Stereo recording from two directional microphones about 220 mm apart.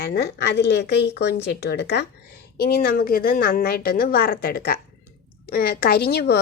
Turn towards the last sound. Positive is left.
turn(degrees=45)  # may be behind; listen again after turning